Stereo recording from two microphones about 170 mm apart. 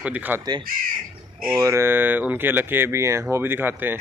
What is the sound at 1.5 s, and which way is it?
A man's voice, 15° right (ahead or behind).